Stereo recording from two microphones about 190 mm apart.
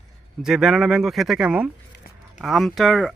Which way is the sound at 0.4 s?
Centre (ahead or behind).